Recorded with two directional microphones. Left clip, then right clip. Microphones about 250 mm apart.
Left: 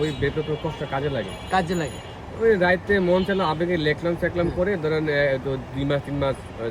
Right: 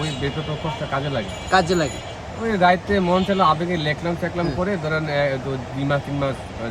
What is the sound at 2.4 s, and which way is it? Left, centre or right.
Speech, centre.